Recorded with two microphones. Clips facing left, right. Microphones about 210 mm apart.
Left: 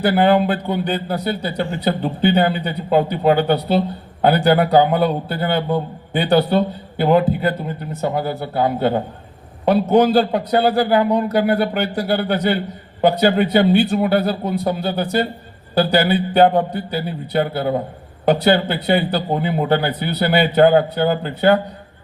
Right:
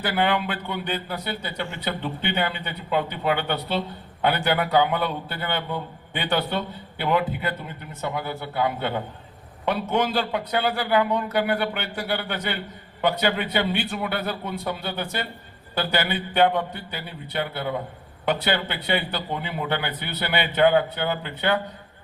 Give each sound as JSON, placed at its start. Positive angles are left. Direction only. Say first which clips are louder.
{"t": 0.0, "sound": "a man's voice", "louder": "left 9 dB", "side_deg": 40}